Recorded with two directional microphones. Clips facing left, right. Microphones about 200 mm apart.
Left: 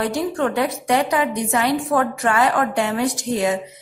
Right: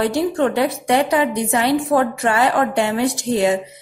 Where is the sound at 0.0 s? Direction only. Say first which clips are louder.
Right 3 dB; 30° right (ahead or behind).